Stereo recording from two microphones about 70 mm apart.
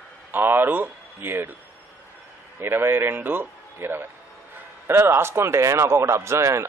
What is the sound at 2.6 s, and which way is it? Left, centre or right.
Speech, right.